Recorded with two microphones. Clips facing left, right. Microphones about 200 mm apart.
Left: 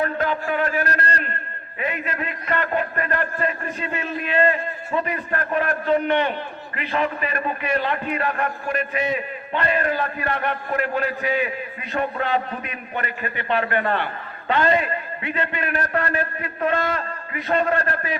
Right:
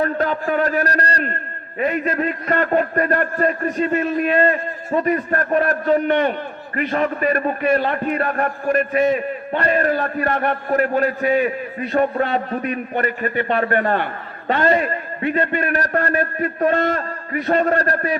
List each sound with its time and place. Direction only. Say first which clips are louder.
0.0 s a man's voice: right 3 dB; 40° right (ahead or behind)